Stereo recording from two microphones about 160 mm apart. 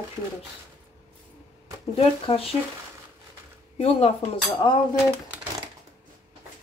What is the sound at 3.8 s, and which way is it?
Speech, 40° left (ahead or behind).